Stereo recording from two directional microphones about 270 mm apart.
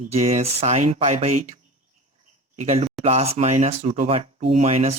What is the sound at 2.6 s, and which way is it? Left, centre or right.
Speech, right.